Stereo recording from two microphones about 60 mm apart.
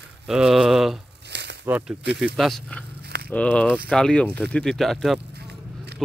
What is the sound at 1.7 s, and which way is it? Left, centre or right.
Speech, right.